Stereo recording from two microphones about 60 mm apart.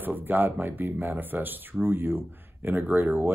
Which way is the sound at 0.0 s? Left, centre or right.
Right.